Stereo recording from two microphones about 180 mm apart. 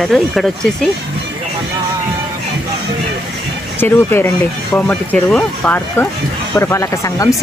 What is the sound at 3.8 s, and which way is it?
Speech, 10° left (ahead or behind).